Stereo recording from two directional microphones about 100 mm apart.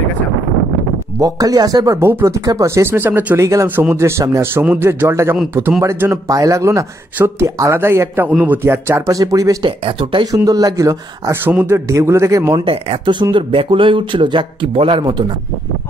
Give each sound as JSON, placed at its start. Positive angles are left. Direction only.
{"t": 1.2, "sound": "speech", "side_deg": -40}
{"t": 3.9, "sound": "a man's voice", "side_deg": -30}
{"t": 9.6, "sound": "speech", "side_deg": -60}
{"t": 10.3, "sound": "a man's voice", "side_deg": -35}
{"t": 11.4, "sound": "speech", "side_deg": -20}
{"t": 12.5, "sound": "speech", "side_deg": -60}